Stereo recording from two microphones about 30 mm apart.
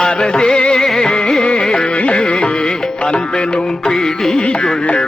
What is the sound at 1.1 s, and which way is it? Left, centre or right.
Music, left.